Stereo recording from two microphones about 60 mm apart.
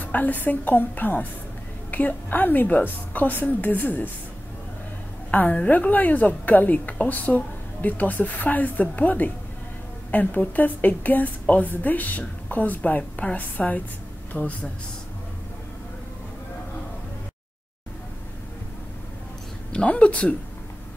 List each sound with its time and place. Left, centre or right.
0.0 s a woman's voice: left
5.3 s a woman's voice: left
19.7 s a woman's voice: centre